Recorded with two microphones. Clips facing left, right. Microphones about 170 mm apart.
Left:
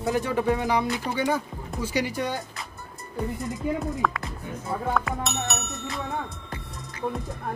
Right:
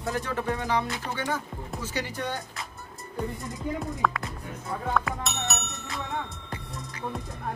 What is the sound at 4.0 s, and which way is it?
Speech, centre (ahead or behind).